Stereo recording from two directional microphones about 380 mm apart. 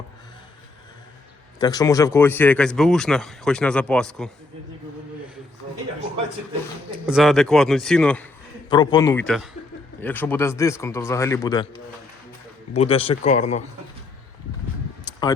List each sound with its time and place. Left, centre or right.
1.5 s speech: centre
7.1 s a man's voice: centre
15.1 s a sound: centre